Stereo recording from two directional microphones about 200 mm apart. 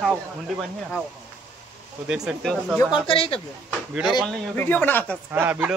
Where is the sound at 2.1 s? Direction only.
5° right (ahead or behind).